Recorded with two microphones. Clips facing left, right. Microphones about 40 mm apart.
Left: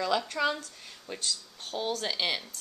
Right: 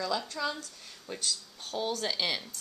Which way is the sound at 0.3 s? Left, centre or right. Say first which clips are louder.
Left 5 dB; left.